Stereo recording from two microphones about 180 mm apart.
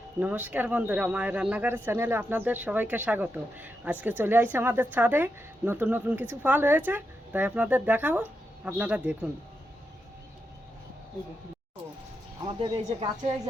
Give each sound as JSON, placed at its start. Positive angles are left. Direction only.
{"t": 0.2, "sound": "speech", "side_deg": -10}
{"t": 12.5, "sound": "speech", "side_deg": -30}